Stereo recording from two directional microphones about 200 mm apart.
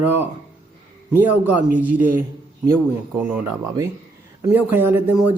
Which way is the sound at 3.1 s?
10° right (ahead or behind).